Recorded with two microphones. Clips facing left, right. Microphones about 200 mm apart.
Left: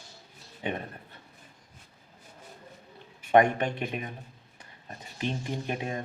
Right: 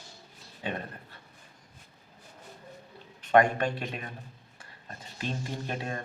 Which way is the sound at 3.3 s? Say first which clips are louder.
Left 1 dB; 20° left (ahead or behind).